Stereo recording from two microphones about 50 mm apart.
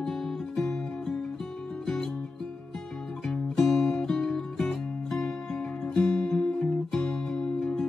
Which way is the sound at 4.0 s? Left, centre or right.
Centre.